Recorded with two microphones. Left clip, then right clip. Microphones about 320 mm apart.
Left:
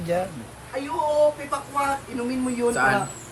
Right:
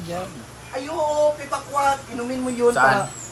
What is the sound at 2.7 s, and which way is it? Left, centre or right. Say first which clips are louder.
Speech: right 5 dB; centre.